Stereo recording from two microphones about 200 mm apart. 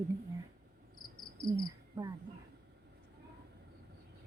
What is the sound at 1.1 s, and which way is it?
Cricket, 25° left (ahead or behind).